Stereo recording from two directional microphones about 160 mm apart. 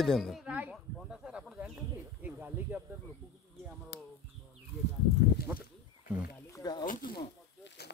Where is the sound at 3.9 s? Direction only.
90° left.